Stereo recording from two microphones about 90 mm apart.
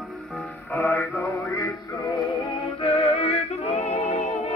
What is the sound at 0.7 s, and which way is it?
Male singing, 20° left (ahead or behind).